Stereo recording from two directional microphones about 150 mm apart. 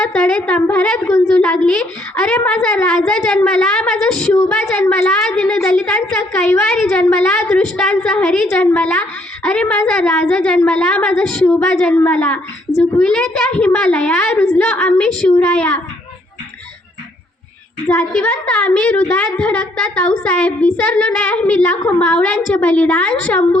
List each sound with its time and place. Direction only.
0.1 s a woman's voice: 5° left (ahead or behind)
1.0 s a woman's voice: 20° left (ahead or behind)
1.4 s a woman's voice: 5° left (ahead or behind)
17.8 s a woman's voice: 10° left (ahead or behind)